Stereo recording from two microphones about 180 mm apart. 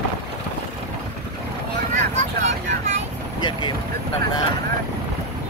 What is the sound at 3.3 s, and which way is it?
Vehicle, 25° left (ahead or behind).